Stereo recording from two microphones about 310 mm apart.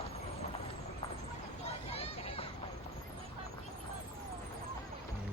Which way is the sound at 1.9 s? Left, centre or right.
Centre.